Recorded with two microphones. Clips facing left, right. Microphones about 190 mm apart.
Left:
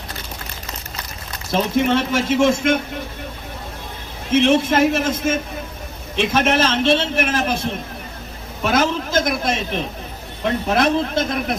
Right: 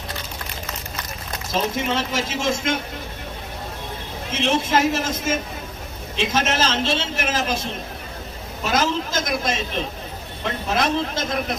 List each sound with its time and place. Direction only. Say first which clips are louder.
1.5 s a man's voice: left 6 dB; 60° left (ahead or behind)
4.3 s a man's voice: left 6 dB; 55° left (ahead or behind)
10.8 s a man's voice: left 3 dB; 55° left (ahead or behind)